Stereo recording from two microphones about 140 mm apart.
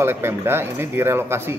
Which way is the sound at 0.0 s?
15° right (ahead or behind).